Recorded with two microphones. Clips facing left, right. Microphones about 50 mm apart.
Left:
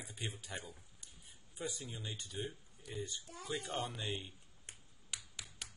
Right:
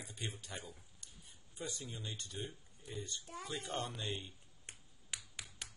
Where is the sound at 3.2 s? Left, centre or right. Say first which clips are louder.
Right 3 dB; right.